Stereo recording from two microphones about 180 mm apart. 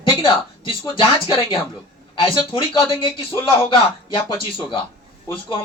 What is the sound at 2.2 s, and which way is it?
Speech, 30° left (ahead or behind).